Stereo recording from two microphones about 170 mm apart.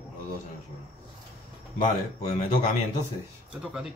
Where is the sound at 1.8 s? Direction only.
40° left (ahead or behind).